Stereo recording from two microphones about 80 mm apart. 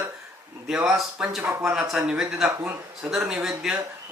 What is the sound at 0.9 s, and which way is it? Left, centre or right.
Speech, centre.